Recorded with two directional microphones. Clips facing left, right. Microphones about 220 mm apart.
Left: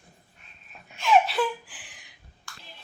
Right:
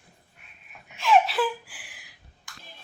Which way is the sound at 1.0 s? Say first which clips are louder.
Even; centre (ahead or behind).